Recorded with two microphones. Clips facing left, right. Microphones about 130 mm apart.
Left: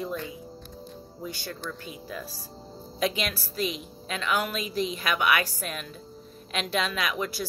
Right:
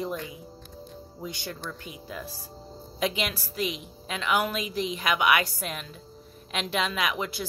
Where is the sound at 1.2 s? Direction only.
15° right (ahead or behind).